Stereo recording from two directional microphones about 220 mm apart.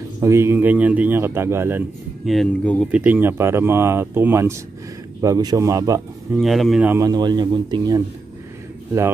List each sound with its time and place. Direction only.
0.2 s a man's voice: 10° right (ahead or behind); by 2.9 s 5° left (ahead or behind)
2.9 s a man's voice: 5° right (ahead or behind)
6.3 s a man's voice: centre (ahead or behind); by 8.0 s 15° right (ahead or behind)